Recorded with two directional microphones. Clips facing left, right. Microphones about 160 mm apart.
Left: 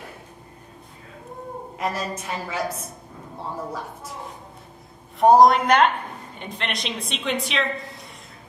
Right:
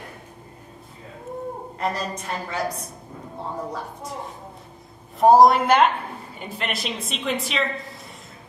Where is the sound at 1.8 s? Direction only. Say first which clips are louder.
Even; 5° left (ahead or behind).